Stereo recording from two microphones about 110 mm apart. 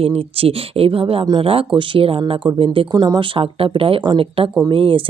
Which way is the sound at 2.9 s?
40° right (ahead or behind).